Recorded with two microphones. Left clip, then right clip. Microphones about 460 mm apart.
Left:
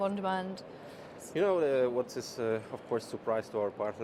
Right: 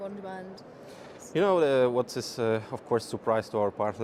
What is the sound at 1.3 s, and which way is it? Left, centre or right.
Speech, right.